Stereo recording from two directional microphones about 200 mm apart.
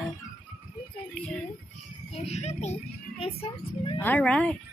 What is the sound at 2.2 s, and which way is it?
Speech, 30° left (ahead or behind).